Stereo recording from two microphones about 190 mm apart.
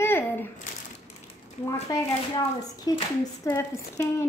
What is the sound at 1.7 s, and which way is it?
A woman's voice, 20° left (ahead or behind).